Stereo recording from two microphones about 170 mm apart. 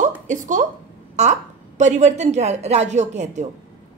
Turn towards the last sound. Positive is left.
turn(degrees=-40)  # may be behind; listen again after turning